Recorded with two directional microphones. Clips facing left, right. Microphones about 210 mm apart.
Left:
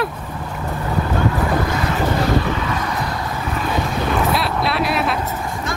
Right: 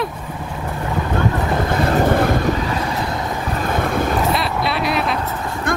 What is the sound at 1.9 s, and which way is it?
Boat, 55° right (ahead or behind).